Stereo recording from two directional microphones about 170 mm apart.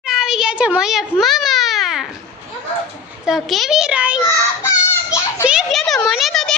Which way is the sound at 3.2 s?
Centre (ahead or behind).